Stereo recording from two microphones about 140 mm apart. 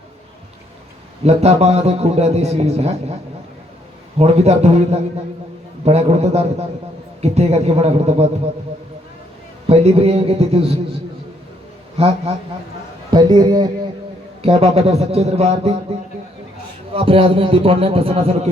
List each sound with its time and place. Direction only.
1.2 s a man's voice: 50° right (ahead or behind)
4.2 s a man's voice: 50° right (ahead or behind)
9.6 s a man's voice: 50° right (ahead or behind)
11.9 s a man's voice: 45° right (ahead or behind)
13.1 s a man's voice: 30° right (ahead or behind)
14.4 s a man's voice: 50° right (ahead or behind)